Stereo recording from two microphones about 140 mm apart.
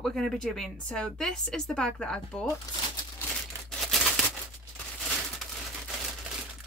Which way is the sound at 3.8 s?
Centre (ahead or behind).